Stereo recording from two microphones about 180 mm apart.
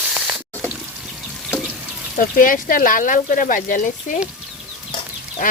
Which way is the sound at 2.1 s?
50° left (ahead or behind).